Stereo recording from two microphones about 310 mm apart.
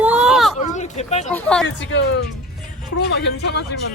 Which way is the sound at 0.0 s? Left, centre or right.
Centre.